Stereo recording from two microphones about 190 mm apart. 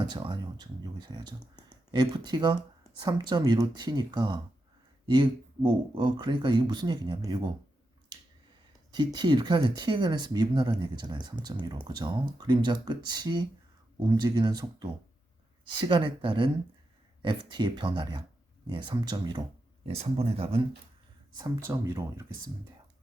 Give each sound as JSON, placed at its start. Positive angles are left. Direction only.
{"t": 0.0, "sound": "speech", "side_deg": -25}
{"t": 8.9, "sound": "speech", "side_deg": -20}
{"t": 19.8, "sound": "speech", "side_deg": -30}
{"t": 21.3, "sound": "speech", "side_deg": -15}